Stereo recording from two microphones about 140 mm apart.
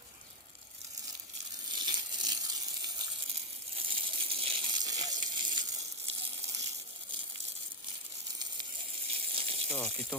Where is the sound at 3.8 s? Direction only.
40° right (ahead or behind).